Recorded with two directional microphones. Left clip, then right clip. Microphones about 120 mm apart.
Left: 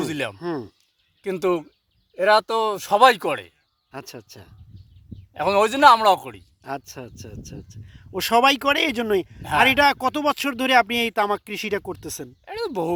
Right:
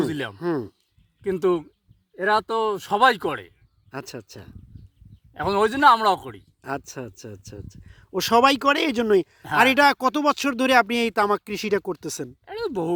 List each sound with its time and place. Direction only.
0.0 s speech: 5° left (ahead or behind)
0.3 s speech: 35° right (ahead or behind)
1.2 s speech: 10° left (ahead or behind)
3.9 s speech: 45° right (ahead or behind)
5.3 s a man's voice: centre (ahead or behind)
6.6 s speech: 40° right (ahead or behind)
12.5 s a sound: centre (ahead or behind)